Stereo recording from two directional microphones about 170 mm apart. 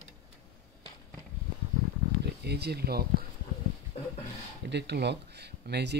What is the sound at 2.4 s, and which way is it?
Speech, 75° right (ahead or behind).